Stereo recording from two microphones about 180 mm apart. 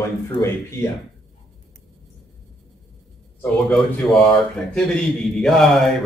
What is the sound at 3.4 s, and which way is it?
Speech, 5° left (ahead or behind).